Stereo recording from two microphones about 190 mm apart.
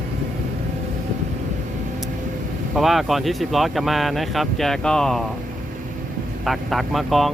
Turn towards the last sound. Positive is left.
turn(degrees=0)  # may be behind; listen again after turning